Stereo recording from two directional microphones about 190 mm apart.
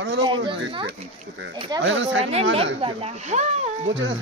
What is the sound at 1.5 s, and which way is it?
Speech, 20° right (ahead or behind).